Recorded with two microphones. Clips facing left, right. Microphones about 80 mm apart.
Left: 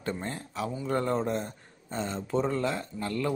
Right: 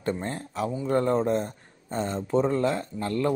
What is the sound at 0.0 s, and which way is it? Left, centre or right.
Speech, right.